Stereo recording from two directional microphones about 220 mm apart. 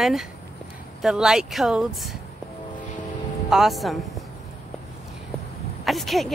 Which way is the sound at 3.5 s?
Centre (ahead or behind).